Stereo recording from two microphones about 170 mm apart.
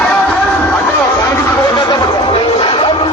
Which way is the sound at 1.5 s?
25° left (ahead or behind).